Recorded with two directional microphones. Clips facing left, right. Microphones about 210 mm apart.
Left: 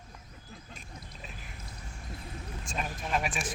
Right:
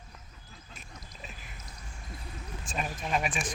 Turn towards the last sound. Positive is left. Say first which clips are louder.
# right 1 dB
turn(degrees=0)  # may be behind; listen again after turning